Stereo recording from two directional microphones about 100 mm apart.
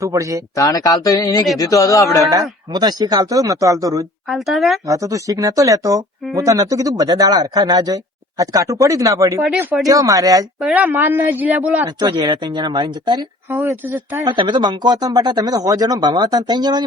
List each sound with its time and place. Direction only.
0.0 s speech: 30° right (ahead or behind)
0.5 s speech: 35° left (ahead or behind)
2.7 s speech: 40° right (ahead or behind)
4.3 s speech: centre (ahead or behind)
4.9 s speech: 35° right (ahead or behind)
10.8 s a man's voice: 20° right (ahead or behind)
11.9 s speech: 45° right (ahead or behind)
14.3 s speech: 50° right (ahead or behind)